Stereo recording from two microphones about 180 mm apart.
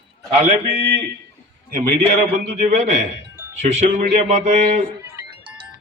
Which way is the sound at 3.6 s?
40° right (ahead or behind).